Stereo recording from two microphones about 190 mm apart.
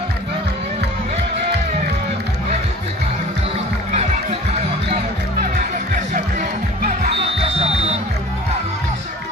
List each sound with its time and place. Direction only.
3.9 s music: 35° right (ahead or behind)
6.1 s music: 40° right (ahead or behind)